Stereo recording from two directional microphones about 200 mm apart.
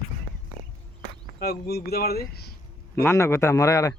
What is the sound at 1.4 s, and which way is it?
Speech, 50° left (ahead or behind).